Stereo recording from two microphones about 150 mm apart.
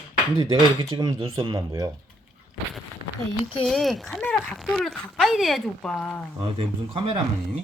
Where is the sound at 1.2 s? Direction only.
40° right (ahead or behind).